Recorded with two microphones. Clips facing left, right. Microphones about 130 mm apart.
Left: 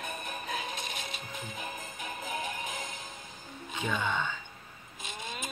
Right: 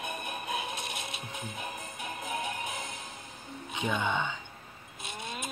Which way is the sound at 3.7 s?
15° right (ahead or behind).